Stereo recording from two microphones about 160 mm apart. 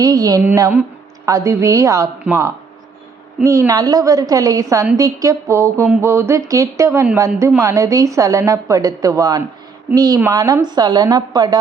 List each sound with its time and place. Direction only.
0.0 s a woman's voice: 25° right (ahead or behind)